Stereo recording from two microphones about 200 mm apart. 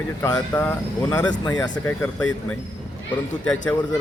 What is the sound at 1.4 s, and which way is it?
Speech, 20° left (ahead or behind).